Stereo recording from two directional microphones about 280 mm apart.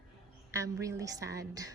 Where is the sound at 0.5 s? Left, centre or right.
Centre.